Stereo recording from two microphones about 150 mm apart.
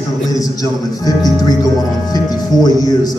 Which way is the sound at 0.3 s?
25° left (ahead or behind).